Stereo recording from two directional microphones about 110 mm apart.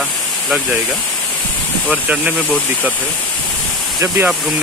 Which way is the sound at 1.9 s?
10° right (ahead or behind).